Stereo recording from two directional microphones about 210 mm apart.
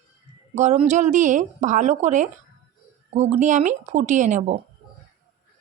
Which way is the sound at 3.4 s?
35° right (ahead or behind).